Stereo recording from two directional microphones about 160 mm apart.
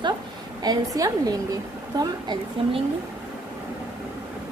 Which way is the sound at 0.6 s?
25° right (ahead or behind).